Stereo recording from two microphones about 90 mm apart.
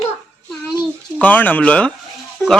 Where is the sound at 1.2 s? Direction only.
20° left (ahead or behind).